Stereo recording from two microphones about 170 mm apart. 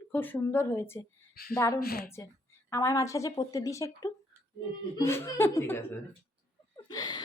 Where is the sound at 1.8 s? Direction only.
65° left (ahead or behind).